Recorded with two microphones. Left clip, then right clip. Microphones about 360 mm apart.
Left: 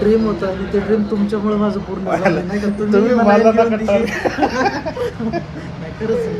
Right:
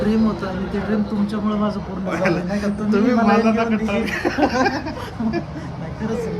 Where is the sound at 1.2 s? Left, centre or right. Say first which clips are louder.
Left 5 dB; centre.